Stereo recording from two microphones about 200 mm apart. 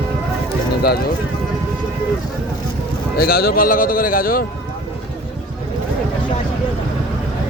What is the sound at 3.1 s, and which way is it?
A man's voice, 50° left (ahead or behind).